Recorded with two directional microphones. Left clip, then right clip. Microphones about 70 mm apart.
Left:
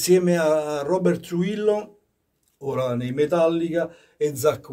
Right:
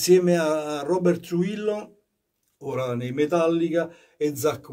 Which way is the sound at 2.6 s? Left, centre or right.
Left.